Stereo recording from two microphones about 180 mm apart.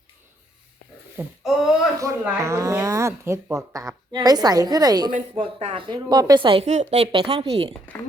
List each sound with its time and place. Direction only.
1.1 s speech: 5° right (ahead or behind); by 7.7 s 35° right (ahead or behind)